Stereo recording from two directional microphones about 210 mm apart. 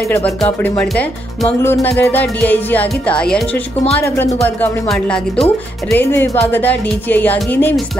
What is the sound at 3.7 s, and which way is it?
Speech, 30° left (ahead or behind).